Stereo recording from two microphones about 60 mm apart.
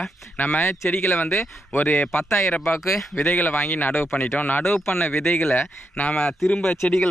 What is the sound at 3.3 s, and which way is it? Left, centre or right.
Speech, left.